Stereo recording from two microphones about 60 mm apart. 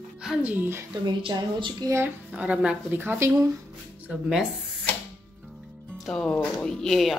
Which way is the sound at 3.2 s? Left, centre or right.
Right.